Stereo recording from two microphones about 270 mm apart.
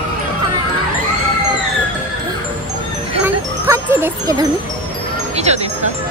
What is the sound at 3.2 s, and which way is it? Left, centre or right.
Music, centre.